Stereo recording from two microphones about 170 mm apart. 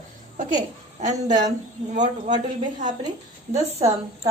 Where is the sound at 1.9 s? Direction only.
45° right (ahead or behind).